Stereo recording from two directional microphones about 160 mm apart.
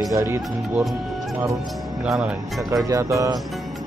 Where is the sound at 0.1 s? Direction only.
15° right (ahead or behind).